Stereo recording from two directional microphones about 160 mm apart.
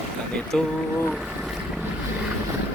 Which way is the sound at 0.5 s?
5° left (ahead or behind).